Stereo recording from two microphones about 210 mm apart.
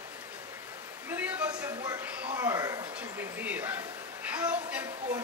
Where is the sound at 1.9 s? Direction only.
15° right (ahead or behind).